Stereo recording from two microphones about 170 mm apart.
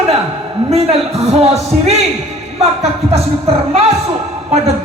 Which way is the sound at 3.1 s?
35° right (ahead or behind).